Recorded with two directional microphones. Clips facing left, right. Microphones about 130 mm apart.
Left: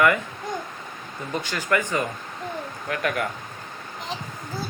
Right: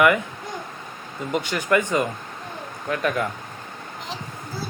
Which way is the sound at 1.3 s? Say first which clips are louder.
Right 3 dB; 20° right (ahead or behind).